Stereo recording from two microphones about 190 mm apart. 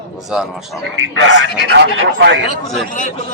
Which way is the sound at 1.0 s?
75° right (ahead or behind).